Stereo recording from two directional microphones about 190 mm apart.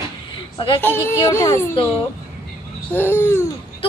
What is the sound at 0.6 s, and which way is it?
Speech, 25° left (ahead or behind).